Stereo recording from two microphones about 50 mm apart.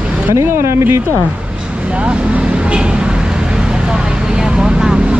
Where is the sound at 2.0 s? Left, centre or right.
Right.